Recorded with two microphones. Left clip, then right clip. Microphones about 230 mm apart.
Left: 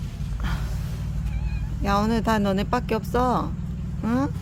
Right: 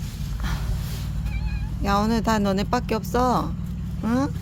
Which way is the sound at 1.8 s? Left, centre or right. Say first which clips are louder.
Right 1 dB; centre.